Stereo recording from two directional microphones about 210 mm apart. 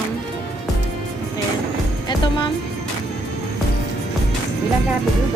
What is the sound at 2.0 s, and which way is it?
Music, 20° left (ahead or behind).